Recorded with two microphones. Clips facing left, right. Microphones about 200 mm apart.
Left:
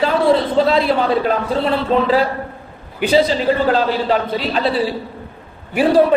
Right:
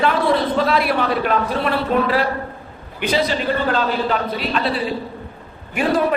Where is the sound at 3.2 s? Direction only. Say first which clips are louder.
Left 4 dB; 35° left (ahead or behind).